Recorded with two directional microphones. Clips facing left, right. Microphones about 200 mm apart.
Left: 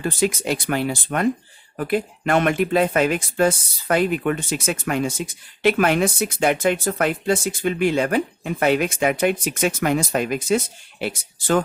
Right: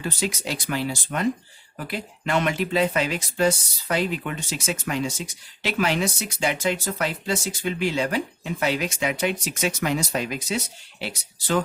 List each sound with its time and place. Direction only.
0.0 s speech: 50° left (ahead or behind)